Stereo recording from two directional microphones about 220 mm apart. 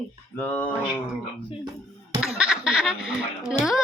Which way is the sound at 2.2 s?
Centre (ahead or behind).